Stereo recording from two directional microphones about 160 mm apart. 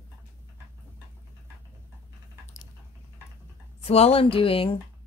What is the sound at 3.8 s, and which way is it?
Speech, 40° left (ahead or behind).